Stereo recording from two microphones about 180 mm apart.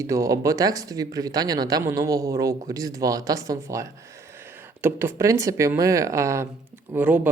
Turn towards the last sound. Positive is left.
turn(degrees=-10)  # may be behind; listen again after turning